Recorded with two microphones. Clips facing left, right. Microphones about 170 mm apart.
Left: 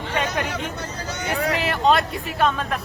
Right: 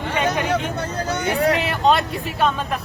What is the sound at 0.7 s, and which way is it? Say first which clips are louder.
Speech: right 6 dB; 55° right (ahead or behind).